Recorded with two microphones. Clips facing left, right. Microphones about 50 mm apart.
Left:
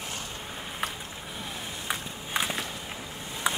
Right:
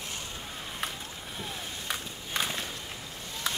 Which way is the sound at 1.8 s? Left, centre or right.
Centre.